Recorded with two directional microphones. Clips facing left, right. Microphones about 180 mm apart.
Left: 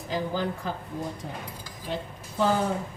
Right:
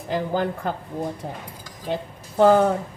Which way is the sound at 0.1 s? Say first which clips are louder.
Right 5 dB; 55° right (ahead or behind).